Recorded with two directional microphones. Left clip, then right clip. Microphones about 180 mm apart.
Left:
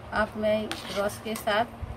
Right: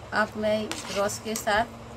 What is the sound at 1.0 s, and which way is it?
Speech, 15° right (ahead or behind).